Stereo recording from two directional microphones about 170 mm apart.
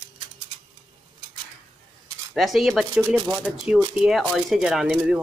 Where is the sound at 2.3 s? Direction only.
Centre (ahead or behind).